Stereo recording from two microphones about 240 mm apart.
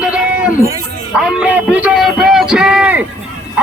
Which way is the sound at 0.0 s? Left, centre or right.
Centre.